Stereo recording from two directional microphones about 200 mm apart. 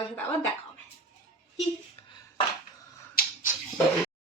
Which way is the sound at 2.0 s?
20° left (ahead or behind).